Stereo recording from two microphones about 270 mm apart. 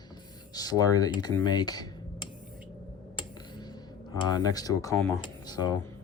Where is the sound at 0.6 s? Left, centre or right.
Centre.